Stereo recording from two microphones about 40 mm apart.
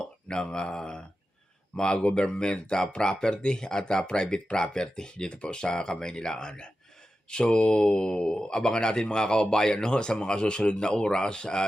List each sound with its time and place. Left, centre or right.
0.0 s speech: left